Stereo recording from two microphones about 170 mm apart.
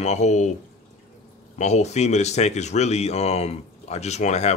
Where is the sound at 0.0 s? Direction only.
40° left (ahead or behind).